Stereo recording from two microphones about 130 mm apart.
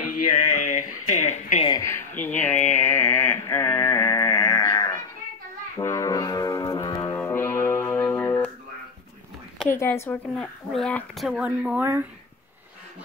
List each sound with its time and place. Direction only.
0.3 s speech: 80° left
1.8 s a sound: 20° left (ahead or behind)
5.8 s music: 25° left (ahead or behind)
7.2 s music: 20° left (ahead or behind)
9.7 s speech: 20° left (ahead or behind); by 11.4 s centre (ahead or behind)
11.4 s a woman's voice: 10° right (ahead or behind)